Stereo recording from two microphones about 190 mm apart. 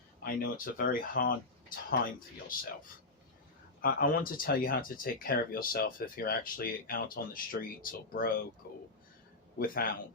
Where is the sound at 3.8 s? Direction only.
45° left (ahead or behind).